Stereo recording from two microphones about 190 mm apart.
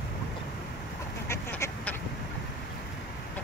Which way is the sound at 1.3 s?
10° left (ahead or behind).